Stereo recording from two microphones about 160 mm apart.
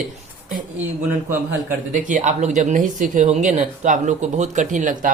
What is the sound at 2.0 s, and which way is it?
A woman's voice, 50° right (ahead or behind).